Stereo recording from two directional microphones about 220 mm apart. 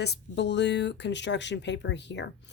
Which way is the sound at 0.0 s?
50° left (ahead or behind).